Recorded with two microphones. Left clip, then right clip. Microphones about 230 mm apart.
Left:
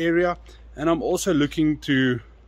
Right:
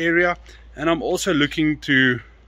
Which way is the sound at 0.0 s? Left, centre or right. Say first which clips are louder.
Right 3 dB; centre.